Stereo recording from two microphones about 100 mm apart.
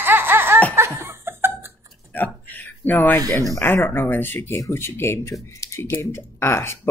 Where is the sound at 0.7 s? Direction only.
25° right (ahead or behind).